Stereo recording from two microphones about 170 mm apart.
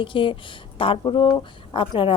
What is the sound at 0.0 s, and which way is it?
A woman's voice, 30° left (ahead or behind).